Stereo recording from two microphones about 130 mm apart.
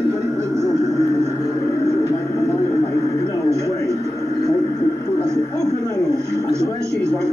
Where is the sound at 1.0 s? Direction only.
20° right (ahead or behind).